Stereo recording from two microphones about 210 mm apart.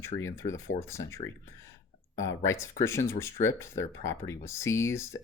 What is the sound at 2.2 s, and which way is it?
Speech, 70° left (ahead or behind).